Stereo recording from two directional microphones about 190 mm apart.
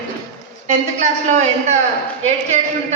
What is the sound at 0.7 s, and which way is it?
Speech, 35° right (ahead or behind).